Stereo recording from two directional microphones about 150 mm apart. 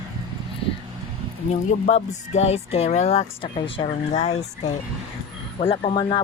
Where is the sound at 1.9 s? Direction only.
45° left (ahead or behind).